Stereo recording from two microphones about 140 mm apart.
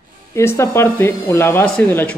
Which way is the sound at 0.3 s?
20° left (ahead or behind).